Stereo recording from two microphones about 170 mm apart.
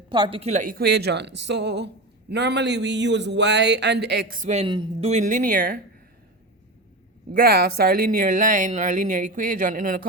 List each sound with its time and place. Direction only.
0.1 s a woman's voice: 30° right (ahead or behind)
4.7 s speech: 30° right (ahead or behind); by 5.8 s 55° right (ahead or behind)
7.3 s speech: 65° right (ahead or behind)